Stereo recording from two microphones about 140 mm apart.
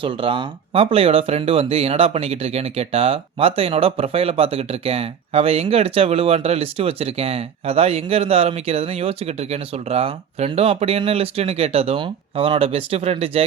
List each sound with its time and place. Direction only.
0.0 s speech: 35° right (ahead or behind)